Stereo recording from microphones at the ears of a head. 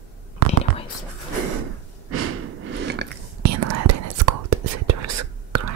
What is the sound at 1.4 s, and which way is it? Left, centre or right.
Breathing, right.